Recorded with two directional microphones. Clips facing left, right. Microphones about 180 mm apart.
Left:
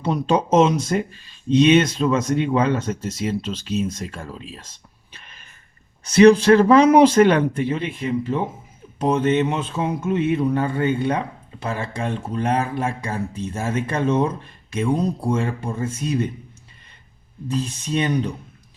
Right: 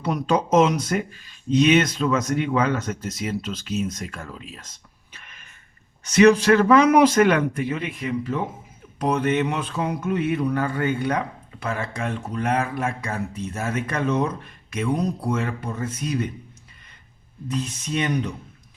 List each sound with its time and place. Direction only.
0.0 s speech: 30° left (ahead or behind)
17.5 s speech: 30° left (ahead or behind)